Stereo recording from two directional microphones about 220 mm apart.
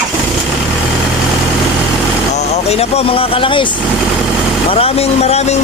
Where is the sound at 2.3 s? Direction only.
30° left (ahead or behind).